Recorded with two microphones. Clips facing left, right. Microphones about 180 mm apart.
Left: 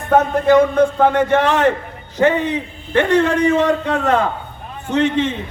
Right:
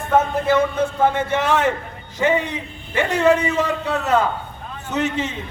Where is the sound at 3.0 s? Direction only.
10° right (ahead or behind).